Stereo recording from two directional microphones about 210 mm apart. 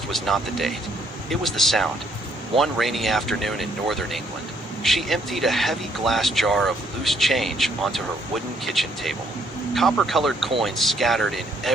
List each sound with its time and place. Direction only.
0.1 s speech: centre (ahead or behind)